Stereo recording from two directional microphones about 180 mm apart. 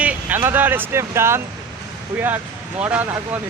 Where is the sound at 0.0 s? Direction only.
10° right (ahead or behind).